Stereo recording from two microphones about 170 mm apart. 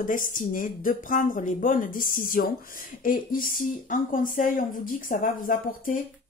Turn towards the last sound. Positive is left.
turn(degrees=50)  # may be behind; listen again after turning